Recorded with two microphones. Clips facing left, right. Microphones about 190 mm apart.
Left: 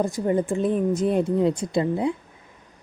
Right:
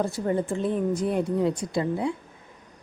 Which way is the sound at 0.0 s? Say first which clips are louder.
Left 3 dB; 15° left (ahead or behind).